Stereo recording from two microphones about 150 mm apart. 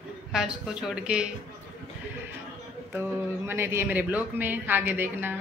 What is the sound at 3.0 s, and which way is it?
Speech, 15° right (ahead or behind).